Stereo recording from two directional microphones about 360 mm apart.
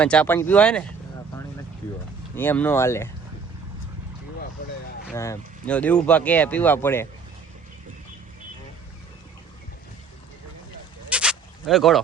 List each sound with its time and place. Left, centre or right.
0.0 s speech: centre
2.3 s speech: centre
4.6 s vehicle: left
5.1 s speech: centre
11.1 s bleat: centre